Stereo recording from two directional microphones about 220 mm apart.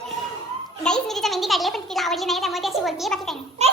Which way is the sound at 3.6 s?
30° right (ahead or behind).